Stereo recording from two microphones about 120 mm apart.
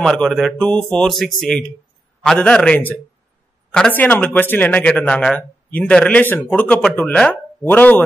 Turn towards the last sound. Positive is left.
turn(degrees=15)  # may be behind; listen again after turning